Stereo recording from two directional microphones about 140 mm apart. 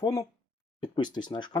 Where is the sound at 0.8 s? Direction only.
35° left (ahead or behind).